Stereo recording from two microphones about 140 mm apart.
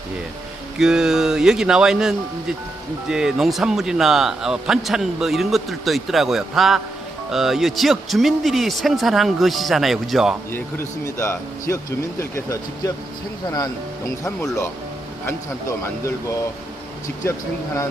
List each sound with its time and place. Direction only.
0.8 s speech: 5° right (ahead or behind)
11.0 s speech: 20° left (ahead or behind)
14.3 s speech: 20° left (ahead or behind)
15.8 s speech: 20° left (ahead or behind)